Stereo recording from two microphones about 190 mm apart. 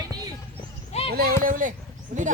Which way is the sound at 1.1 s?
55° right (ahead or behind).